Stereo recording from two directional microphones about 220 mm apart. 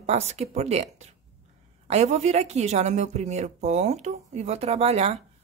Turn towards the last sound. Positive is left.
turn(degrees=-30)  # may be behind; listen again after turning